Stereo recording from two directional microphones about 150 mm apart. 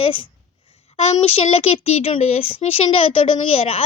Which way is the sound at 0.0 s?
35° left (ahead or behind).